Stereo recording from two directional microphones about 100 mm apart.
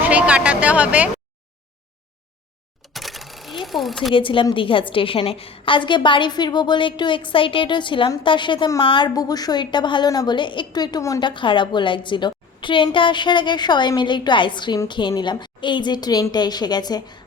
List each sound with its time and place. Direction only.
0.0 s speech: 15° right (ahead or behind)
2.9 s a sound: centre (ahead or behind)
4.1 s a woman's voice: 60° left (ahead or behind)
8.8 s a woman's voice: 60° left (ahead or behind)
9.1 s a woman's voice: 40° left (ahead or behind)
11.2 s a woman's voice: 50° left (ahead or behind)